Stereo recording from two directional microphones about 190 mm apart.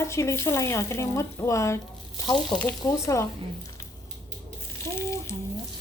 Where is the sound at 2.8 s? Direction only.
15° left (ahead or behind).